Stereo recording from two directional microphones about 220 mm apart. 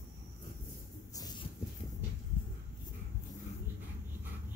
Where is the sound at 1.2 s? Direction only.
20° left (ahead or behind).